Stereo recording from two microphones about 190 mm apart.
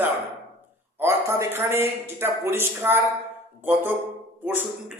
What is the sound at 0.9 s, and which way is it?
A man's voice, 15° right (ahead or behind).